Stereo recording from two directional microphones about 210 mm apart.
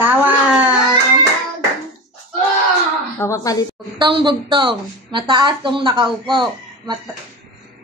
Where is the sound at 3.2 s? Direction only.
15° left (ahead or behind).